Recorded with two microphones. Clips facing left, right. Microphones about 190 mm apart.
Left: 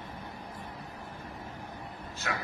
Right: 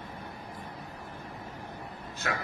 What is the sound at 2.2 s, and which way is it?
Speech, 55° right (ahead or behind).